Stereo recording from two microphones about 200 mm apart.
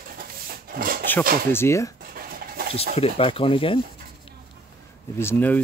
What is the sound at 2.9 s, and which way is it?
Speech, 30° left (ahead or behind).